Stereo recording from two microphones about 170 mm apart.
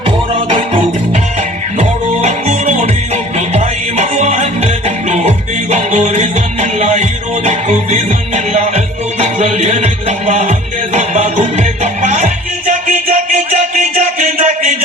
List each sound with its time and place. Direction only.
0.3 s music: 30° right (ahead or behind)
1.8 s music: 45° right (ahead or behind)